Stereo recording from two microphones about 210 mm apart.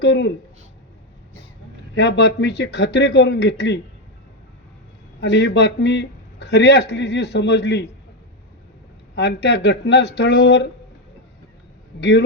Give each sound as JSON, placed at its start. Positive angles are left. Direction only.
{"t": 0.0, "sound": "speech", "side_deg": 55}
{"t": 2.0, "sound": "speech", "side_deg": 55}
{"t": 5.2, "sound": "speech", "side_deg": 55}
{"t": 9.1, "sound": "speech", "side_deg": 55}
{"t": 11.9, "sound": "speech", "side_deg": 55}